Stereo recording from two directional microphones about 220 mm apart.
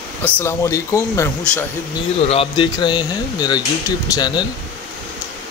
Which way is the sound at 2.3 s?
25° left (ahead or behind).